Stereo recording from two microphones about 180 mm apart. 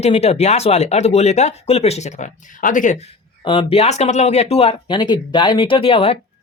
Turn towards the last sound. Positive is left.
turn(degrees=30)  # may be behind; listen again after turning